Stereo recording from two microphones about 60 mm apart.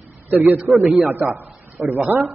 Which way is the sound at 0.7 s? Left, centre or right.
Centre.